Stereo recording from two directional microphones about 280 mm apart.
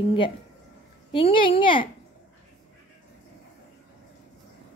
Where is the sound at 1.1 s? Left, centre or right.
Centre.